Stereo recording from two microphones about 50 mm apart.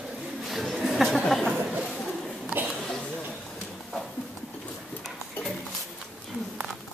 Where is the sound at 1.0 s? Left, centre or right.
Centre.